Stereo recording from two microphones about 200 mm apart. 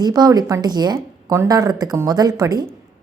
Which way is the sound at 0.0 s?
20° right (ahead or behind).